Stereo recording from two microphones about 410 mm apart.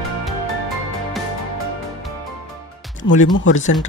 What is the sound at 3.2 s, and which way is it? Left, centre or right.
Speech, left.